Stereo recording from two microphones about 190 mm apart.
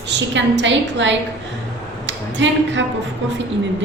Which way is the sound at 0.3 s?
75° right (ahead or behind).